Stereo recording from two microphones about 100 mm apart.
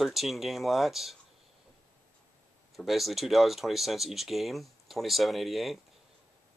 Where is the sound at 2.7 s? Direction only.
Centre (ahead or behind).